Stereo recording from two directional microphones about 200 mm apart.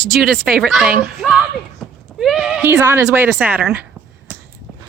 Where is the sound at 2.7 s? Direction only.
15° right (ahead or behind).